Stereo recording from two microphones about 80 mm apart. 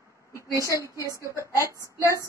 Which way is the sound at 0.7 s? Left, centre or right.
Left.